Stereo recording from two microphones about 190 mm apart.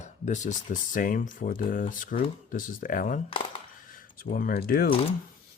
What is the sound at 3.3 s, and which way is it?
Coin, 25° left (ahead or behind).